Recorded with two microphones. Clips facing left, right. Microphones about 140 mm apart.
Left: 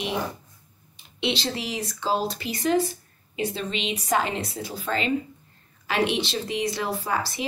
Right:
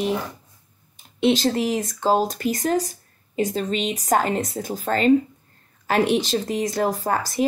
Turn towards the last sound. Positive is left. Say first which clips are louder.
# right 5 dB
turn(degrees=-45)  # may be behind; listen again after turning